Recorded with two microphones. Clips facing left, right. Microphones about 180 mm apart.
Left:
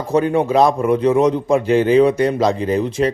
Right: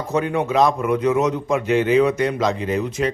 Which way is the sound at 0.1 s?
35° left (ahead or behind).